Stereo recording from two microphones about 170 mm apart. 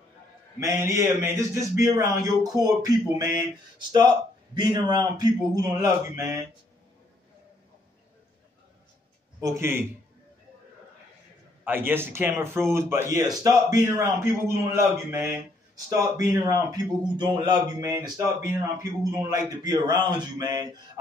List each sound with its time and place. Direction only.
0.6 s speech: 20° right (ahead or behind)
4.6 s speech: 25° right (ahead or behind)
9.4 s speech: 15° right (ahead or behind)
11.6 s speech: 10° right (ahead or behind)